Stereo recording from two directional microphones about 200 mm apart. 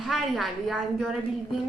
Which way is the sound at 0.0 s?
Centre (ahead or behind).